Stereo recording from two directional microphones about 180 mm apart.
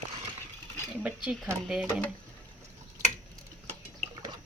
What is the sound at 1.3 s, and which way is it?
Speech, 5° right (ahead or behind).